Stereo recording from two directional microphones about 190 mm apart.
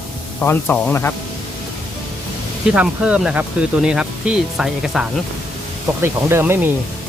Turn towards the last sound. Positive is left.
turn(degrees=-10)  # may be behind; listen again after turning